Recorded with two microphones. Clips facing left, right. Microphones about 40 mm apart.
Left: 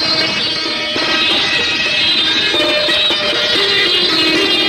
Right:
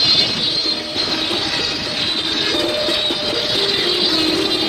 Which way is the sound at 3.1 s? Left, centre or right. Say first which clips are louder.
Left 5 dB; left.